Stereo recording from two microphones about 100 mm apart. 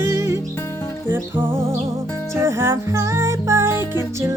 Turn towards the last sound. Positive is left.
turn(degrees=-25)  # may be behind; listen again after turning